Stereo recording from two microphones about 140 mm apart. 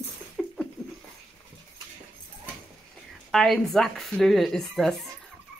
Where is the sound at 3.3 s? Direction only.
5° left (ahead or behind).